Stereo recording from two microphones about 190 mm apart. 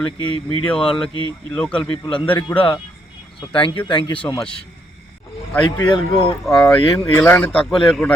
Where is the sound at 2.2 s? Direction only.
5° left (ahead or behind).